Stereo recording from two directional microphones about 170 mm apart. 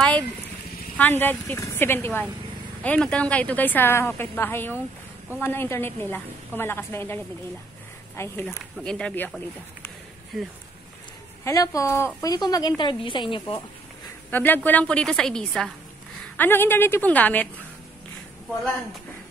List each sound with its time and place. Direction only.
0.9 s a woman's voice: 10° left (ahead or behind)
8.2 s a woman's voice: 15° left (ahead or behind)
11.4 s a woman's voice: 20° left (ahead or behind)
14.3 s a woman's voice: 10° left (ahead or behind)